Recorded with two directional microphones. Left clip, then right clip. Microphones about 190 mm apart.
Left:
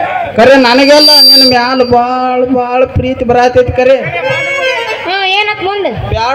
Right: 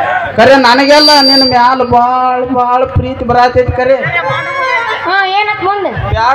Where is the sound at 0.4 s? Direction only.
30° left (ahead or behind).